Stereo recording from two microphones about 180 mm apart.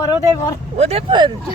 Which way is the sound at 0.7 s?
35° right (ahead or behind).